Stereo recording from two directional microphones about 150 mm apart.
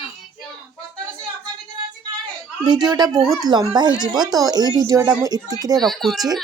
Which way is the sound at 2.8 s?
25° right (ahead or behind).